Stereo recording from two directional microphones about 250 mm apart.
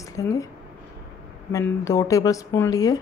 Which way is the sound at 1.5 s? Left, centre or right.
Centre.